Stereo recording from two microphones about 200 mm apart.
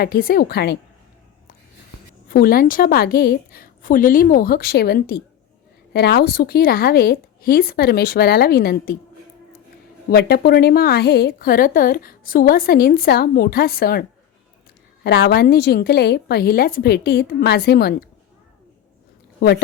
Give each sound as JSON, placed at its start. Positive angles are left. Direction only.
{"t": 0.0, "sound": "a woman's voice", "side_deg": 50}
{"t": 2.3, "sound": "a woman's voice", "side_deg": 45}
{"t": 10.1, "sound": "a woman's voice", "side_deg": 50}
{"t": 15.0, "sound": "a woman's voice", "side_deg": 55}
{"t": 19.4, "sound": "speech", "side_deg": 55}